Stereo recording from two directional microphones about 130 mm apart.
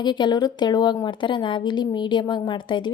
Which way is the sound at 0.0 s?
35° left (ahead or behind).